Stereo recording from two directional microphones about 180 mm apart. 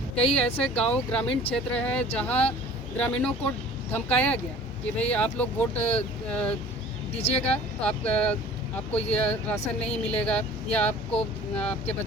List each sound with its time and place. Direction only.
0.3 s speech: 35° left (ahead or behind)
0.8 s speech: 5° left (ahead or behind)